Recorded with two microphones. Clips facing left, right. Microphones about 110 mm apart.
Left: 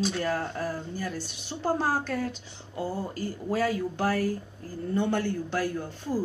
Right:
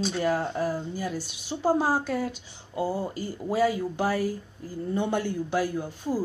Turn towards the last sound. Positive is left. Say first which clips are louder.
# right 2 dB
turn(degrees=-10)  # may be behind; listen again after turning